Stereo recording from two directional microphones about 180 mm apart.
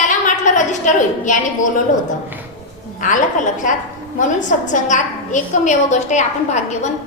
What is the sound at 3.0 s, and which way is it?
A woman's voice, 45° left (ahead or behind).